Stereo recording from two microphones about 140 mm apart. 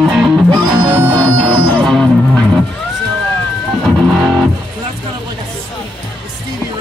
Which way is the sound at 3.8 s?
Centre (ahead or behind).